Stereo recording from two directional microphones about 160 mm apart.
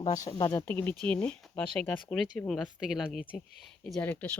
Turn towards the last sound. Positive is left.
turn(degrees=10)  # may be behind; listen again after turning